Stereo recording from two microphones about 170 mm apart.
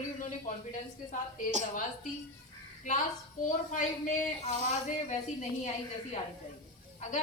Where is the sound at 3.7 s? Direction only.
50° left (ahead or behind).